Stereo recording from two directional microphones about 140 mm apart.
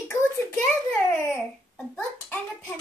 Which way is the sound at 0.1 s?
20° left (ahead or behind).